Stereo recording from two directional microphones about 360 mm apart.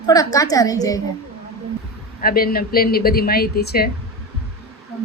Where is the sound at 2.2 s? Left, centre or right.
Left.